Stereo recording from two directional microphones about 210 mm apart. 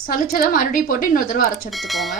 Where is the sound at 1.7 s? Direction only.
Centre (ahead or behind).